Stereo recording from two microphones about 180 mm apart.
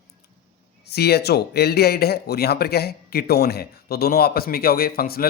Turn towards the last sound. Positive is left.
turn(degrees=55)  # may be behind; listen again after turning